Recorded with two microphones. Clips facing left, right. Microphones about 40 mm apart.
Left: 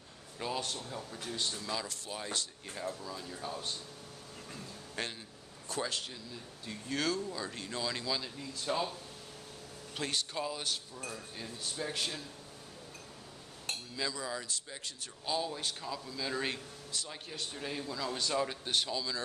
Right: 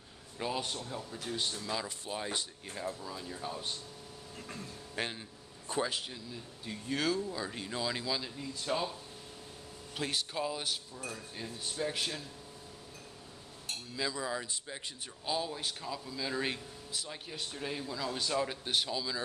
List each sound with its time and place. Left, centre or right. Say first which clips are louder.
0.4 s speech: right 1 dB; centre
4.9 s speech: right 2 dB; centre
9.9 s speech: right 1 dB; centre
11.0 s speech: right 1 dB; centre
11.3 s speech: right 3 dB; centre
13.9 s speech: right 3 dB; centre
15.2 s speech: even; centre